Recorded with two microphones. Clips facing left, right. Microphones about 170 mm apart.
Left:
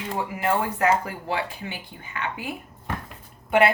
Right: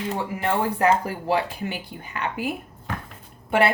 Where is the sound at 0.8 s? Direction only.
35° right (ahead or behind).